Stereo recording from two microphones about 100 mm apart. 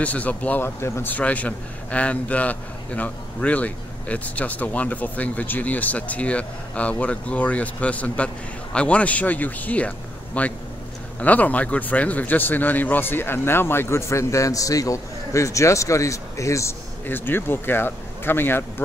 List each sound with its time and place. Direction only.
0.0 s a man's voice: 15° left (ahead or behind); by 16.7 s 30° left (ahead or behind)
17.0 s speech: 20° left (ahead or behind)